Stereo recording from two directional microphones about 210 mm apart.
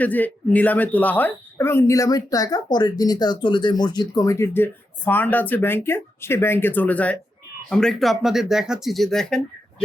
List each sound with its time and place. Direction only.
0.0 s speech: 10° left (ahead or behind)